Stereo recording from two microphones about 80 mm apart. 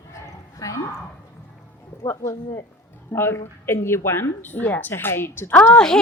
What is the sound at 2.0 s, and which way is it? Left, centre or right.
A woman's voice, left.